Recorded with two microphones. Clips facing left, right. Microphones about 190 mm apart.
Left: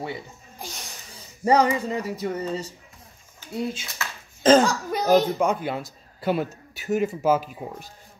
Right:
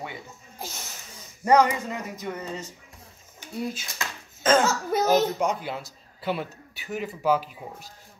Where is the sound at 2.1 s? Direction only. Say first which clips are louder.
Left 6 dB; 35° left (ahead or behind).